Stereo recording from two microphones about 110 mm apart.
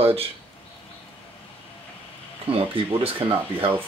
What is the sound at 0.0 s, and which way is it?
Speech, 60° right (ahead or behind).